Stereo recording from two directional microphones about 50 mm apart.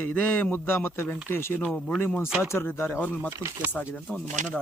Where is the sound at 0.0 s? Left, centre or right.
Left.